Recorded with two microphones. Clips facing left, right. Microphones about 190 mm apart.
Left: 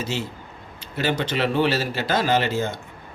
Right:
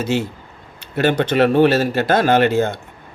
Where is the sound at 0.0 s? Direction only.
60° right (ahead or behind).